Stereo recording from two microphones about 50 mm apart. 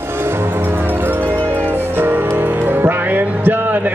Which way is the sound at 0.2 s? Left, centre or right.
Right.